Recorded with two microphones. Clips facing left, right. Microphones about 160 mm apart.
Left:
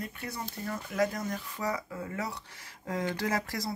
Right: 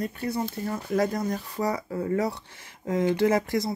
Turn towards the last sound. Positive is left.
turn(degrees=-20)  # may be behind; listen again after turning